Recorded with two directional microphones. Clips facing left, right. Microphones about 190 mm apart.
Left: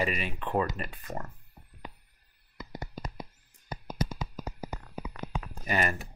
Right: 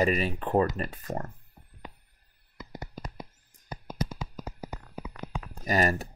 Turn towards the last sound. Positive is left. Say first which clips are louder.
# right 4 dB
turn(degrees=-35)  # may be behind; listen again after turning